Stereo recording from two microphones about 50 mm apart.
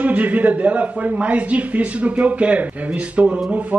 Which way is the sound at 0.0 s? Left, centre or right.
Right.